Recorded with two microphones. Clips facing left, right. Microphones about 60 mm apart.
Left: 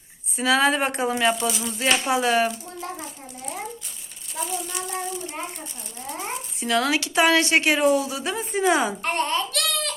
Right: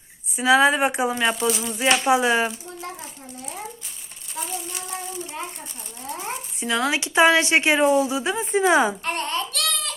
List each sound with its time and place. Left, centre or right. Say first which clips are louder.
0.3 s a woman's voice: right 3 dB; centre
1.9 s a woman's voice: right 3 dB; right
6.6 s a woman's voice: left 1 dB; centre
6.9 s a woman's voice: right 4 dB; right
9.0 s speech: left 2 dB; left